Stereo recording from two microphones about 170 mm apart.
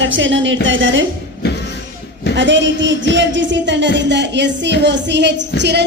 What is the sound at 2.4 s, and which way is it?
Music, 90° right.